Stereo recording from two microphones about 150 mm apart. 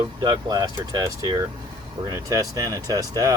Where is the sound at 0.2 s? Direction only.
25° right (ahead or behind).